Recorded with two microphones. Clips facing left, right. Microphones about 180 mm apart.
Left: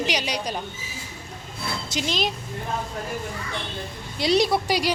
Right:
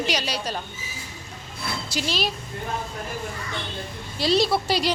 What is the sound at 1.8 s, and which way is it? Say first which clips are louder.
Speech: left 1 dB; 20° left (ahead or behind).